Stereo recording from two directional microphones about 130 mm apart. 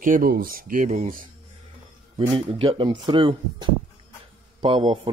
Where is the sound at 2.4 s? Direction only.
40° right (ahead or behind).